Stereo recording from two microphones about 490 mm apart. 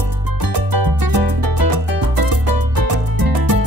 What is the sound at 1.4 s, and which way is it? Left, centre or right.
Music, right.